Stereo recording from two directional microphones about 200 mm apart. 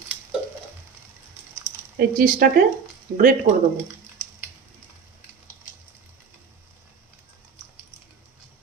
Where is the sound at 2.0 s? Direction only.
45° right (ahead or behind).